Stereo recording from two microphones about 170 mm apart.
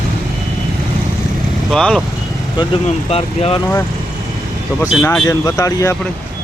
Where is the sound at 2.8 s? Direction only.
35° left (ahead or behind).